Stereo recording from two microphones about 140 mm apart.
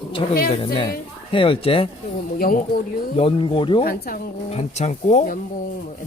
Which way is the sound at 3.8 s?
85° left.